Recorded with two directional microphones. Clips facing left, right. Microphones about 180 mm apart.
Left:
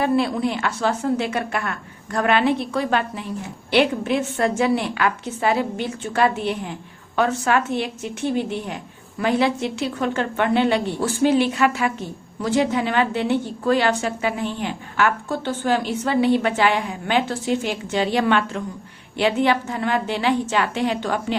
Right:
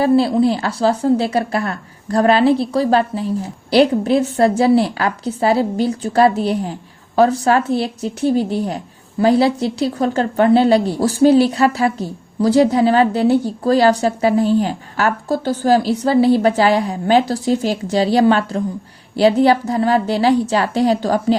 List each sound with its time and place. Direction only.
0.0 s a woman's voice: 30° right (ahead or behind)